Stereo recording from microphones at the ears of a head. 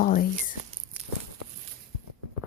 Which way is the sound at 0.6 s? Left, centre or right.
Right.